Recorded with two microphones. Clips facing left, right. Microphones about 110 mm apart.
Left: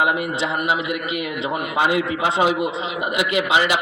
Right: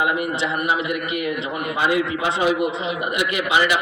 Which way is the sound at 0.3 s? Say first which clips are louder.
Even; 20° left (ahead or behind).